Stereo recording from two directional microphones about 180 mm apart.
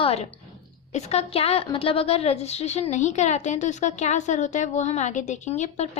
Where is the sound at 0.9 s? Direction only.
35° left (ahead or behind).